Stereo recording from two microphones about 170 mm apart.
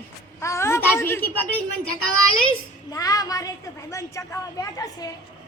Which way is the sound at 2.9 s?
20° left (ahead or behind).